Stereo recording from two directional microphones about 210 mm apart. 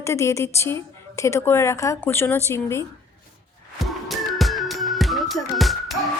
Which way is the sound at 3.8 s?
Centre (ahead or behind).